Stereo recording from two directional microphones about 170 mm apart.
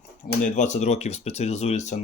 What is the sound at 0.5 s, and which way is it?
Speech, 45° left (ahead or behind).